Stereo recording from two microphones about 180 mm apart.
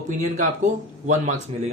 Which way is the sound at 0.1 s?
45° right (ahead or behind).